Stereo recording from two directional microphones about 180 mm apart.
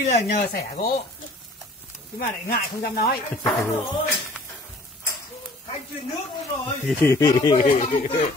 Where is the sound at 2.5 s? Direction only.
55° left (ahead or behind).